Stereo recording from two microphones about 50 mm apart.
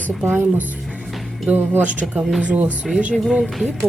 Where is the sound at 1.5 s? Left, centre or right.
Right.